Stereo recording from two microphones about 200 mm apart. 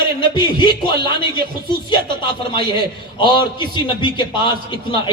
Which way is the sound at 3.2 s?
25° left (ahead or behind).